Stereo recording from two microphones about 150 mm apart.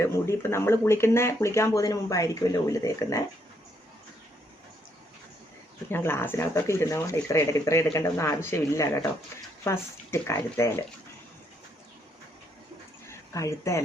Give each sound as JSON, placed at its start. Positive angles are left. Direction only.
{"t": 0.0, "sound": "speech", "side_deg": 15}
{"t": 5.9, "sound": "speech", "side_deg": 15}
{"t": 13.1, "sound": "speech", "side_deg": 20}